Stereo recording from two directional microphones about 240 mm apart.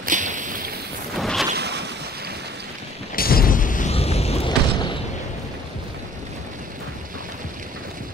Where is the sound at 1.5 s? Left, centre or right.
Right.